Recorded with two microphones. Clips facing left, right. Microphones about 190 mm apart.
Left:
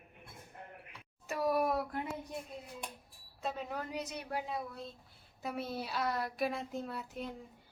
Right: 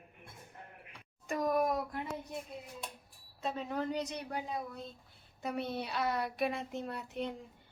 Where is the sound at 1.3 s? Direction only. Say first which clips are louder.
Right 1 dB; 5° left (ahead or behind).